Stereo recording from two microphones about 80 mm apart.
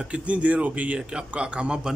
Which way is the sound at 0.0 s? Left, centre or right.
Centre.